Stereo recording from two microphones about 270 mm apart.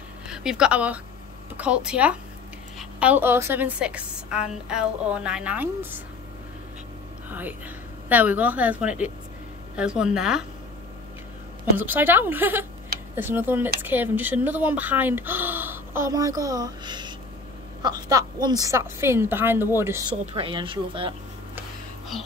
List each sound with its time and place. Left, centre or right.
0.3 s a woman's voice: centre
7.2 s a woman's voice: centre
11.8 s speech: centre